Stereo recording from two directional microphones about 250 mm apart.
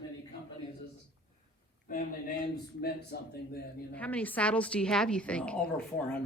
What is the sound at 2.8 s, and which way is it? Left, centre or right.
Speech, left.